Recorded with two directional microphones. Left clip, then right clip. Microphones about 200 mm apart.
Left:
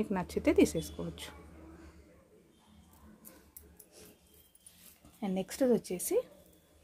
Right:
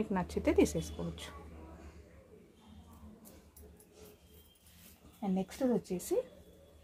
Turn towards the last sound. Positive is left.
turn(degrees=45)  # may be behind; listen again after turning